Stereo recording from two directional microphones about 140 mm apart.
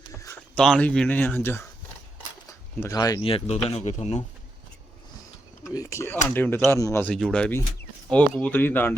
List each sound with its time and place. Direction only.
0.5 s speech: 5° left (ahead or behind)
2.8 s speech: 25° left (ahead or behind)
3.2 s speech: 40° left (ahead or behind)
5.7 s speech: 20° left (ahead or behind)
7.1 s speech: 5° left (ahead or behind)